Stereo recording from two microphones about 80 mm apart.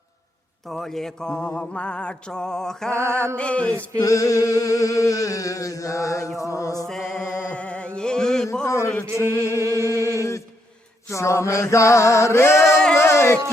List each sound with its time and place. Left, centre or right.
0.7 s mantra: centre
1.7 s a sound: centre
2.9 s music: right
3.3 s a sound: centre
4.0 s a sound: left
6.8 s mantra: centre
8.6 s male singing: left
9.5 s music: left
11.1 s male singing: left
13.0 s music: left